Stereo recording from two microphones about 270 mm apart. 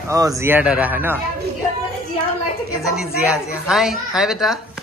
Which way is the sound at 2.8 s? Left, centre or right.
Centre.